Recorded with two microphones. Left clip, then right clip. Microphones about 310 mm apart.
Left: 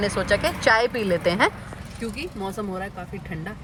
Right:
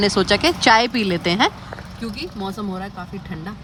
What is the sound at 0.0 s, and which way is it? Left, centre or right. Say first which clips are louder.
Speech: right 5 dB; centre.